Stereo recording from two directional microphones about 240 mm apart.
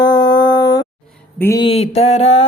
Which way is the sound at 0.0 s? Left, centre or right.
Centre.